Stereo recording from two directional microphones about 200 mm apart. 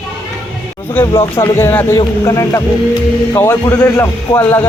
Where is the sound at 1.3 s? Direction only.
15° left (ahead or behind).